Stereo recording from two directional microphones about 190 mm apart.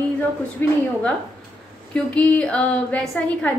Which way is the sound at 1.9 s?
5° left (ahead or behind).